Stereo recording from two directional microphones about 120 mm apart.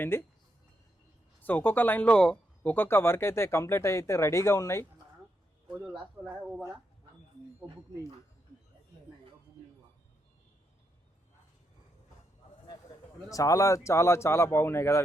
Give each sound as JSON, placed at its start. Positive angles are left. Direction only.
{"t": 0.0, "sound": "speech", "side_deg": 20}
{"t": 1.4, "sound": "speech", "side_deg": 15}
{"t": 5.8, "sound": "speech", "side_deg": -5}
{"t": 13.3, "sound": "speech", "side_deg": 30}